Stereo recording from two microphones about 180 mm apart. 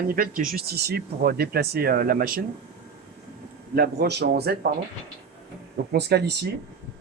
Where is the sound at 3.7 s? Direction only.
60° right (ahead or behind).